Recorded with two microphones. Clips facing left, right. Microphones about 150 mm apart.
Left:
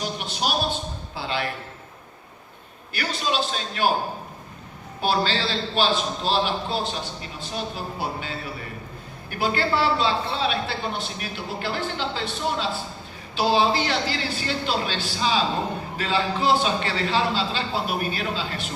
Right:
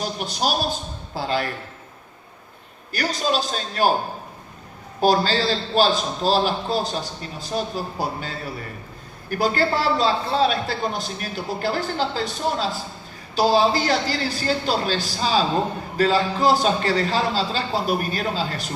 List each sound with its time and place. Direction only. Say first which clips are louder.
0.0 s a sound: right 3 dB; 40° right (ahead or behind)
2.9 s a man's voice: right 3 dB; 40° right (ahead or behind)
4.9 s a man's voice: right 5 dB; 40° right (ahead or behind)